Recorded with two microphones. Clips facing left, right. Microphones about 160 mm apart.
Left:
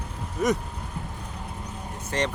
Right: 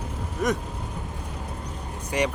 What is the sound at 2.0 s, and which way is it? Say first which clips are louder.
Speech: right 2 dB; 10° right (ahead or behind).